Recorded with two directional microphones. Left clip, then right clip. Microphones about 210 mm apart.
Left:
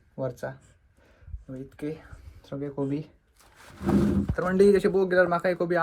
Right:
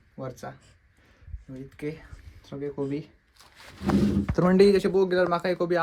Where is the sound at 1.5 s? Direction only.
5° right (ahead or behind).